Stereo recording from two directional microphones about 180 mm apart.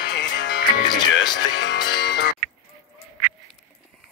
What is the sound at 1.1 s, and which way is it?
Music, 80° left.